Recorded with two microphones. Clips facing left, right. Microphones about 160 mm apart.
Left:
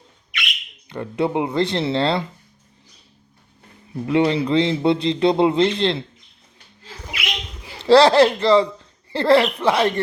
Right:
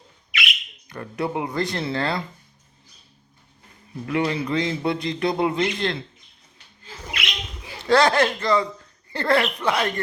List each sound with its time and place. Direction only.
0.3 s bird: centre (ahead or behind)
0.9 s a man's voice: 25° left (ahead or behind)
4.0 s a man's voice: 25° left (ahead or behind)
7.9 s a man's voice: 30° left (ahead or behind)